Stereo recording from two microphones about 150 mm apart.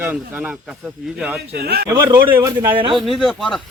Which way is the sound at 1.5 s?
90° right.